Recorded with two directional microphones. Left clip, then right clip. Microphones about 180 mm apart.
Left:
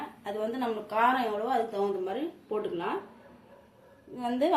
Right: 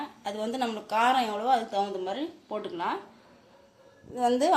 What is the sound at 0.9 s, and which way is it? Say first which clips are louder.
Speech: right 1 dB; 55° right (ahead or behind).